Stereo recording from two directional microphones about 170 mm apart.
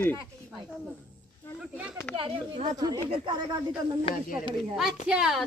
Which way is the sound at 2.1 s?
35° right (ahead or behind).